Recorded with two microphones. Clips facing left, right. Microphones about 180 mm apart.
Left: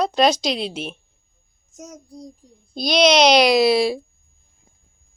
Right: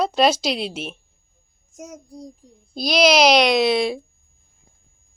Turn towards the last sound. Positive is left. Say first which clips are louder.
# left 2 dB
turn(degrees=0)  # may be behind; listen again after turning